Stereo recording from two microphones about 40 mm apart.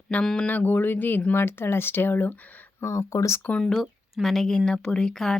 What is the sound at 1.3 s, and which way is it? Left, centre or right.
Speech, left.